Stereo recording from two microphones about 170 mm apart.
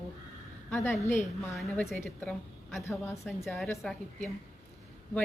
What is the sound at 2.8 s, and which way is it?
Speech, 15° left (ahead or behind).